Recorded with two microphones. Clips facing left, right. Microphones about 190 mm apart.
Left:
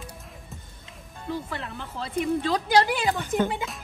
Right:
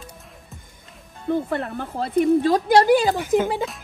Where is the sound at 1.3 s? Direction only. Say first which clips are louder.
Right 9 dB; 50° right (ahead or behind).